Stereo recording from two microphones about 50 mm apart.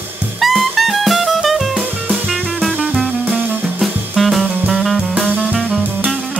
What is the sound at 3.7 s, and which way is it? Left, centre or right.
Music, centre.